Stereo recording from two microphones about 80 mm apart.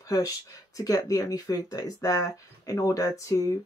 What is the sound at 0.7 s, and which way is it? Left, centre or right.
Speech, left.